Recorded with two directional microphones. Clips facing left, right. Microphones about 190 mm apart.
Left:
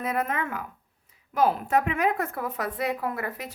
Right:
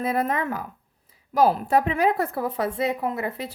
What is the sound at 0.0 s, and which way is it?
Speech, 30° right (ahead or behind).